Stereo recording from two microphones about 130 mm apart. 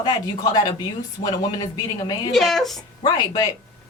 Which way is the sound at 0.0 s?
30° left (ahead or behind).